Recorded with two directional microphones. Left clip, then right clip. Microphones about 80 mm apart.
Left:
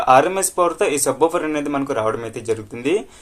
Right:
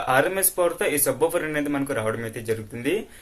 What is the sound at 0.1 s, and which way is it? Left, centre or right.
Speech, left.